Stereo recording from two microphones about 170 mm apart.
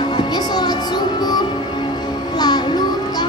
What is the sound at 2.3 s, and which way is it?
Music, 25° left (ahead or behind).